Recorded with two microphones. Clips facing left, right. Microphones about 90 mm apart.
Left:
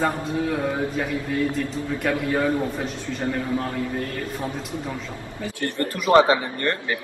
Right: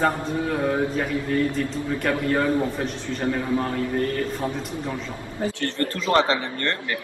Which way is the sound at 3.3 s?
15° right (ahead or behind).